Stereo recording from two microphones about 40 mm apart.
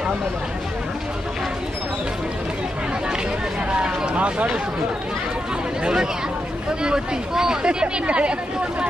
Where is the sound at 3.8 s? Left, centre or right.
Right.